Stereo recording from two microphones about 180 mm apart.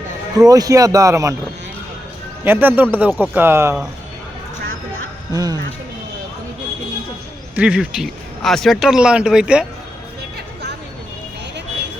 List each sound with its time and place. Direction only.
0.3 s speech: 20° right (ahead or behind)
2.4 s speech: 10° right (ahead or behind)
5.3 s speech: 20° right (ahead or behind)
7.5 s speech: 5° right (ahead or behind)